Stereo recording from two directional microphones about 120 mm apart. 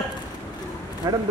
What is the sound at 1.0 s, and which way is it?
Speech, 30° right (ahead or behind).